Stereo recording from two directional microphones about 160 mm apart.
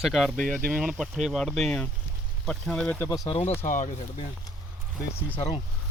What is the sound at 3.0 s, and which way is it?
Speech, 25° left (ahead or behind).